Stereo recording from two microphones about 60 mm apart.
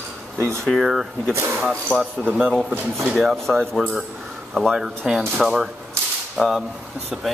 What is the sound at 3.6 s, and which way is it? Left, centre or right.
Speech, centre.